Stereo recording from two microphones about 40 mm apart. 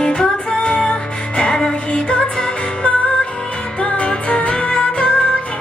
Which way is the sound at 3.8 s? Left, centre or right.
Left.